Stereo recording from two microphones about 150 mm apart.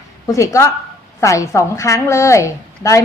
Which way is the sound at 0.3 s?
20° left (ahead or behind).